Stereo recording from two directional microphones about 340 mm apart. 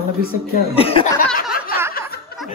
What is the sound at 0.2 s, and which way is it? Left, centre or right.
Speech, left.